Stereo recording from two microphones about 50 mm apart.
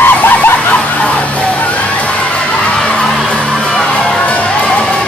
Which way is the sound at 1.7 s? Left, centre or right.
Left.